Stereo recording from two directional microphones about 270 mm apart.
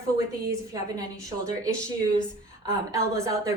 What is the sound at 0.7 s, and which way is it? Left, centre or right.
Speech, centre.